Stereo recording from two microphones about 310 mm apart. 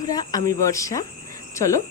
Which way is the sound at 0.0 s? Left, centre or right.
Centre.